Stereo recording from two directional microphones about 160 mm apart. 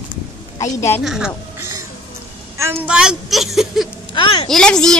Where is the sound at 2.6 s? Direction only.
15° right (ahead or behind).